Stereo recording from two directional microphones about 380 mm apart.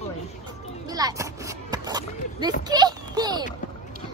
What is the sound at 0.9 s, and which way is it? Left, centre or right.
A child's voice, centre.